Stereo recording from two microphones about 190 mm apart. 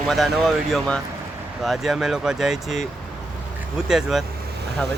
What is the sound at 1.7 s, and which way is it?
Speech, centre (ahead or behind).